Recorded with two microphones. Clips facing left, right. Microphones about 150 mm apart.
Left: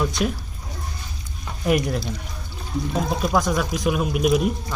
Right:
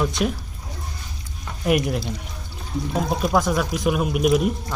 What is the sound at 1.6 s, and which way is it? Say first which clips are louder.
Speech: even; 5° right (ahead or behind).